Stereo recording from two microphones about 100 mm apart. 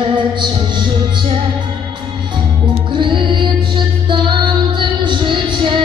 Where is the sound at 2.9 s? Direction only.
55° right (ahead or behind).